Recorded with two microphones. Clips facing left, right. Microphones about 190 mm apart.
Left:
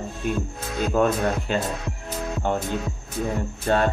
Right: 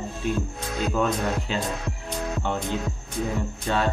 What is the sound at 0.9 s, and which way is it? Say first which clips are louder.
Speech: left 5 dB; 50° left (ahead or behind).